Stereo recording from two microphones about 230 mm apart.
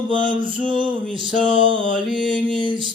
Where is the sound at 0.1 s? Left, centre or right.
Right.